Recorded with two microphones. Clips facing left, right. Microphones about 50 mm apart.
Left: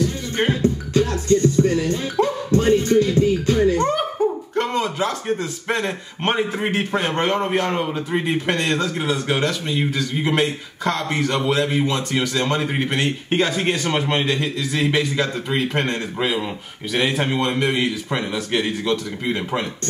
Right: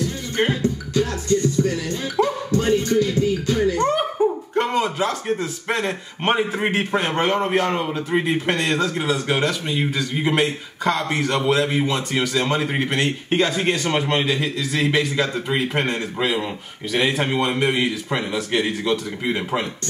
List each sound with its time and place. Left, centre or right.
0.5 s music: left
3.9 s speech: centre